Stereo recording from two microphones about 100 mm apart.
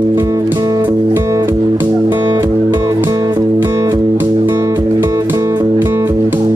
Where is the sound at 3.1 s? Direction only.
40° right (ahead or behind).